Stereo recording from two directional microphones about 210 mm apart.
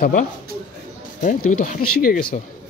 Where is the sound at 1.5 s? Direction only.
35° left (ahead or behind).